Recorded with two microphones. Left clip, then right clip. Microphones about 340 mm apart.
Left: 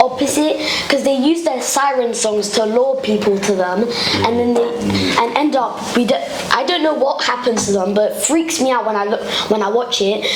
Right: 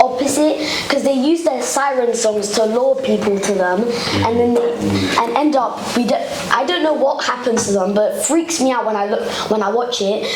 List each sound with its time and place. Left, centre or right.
0.0 s a woman's voice: left
6.1 s a woman's voice: left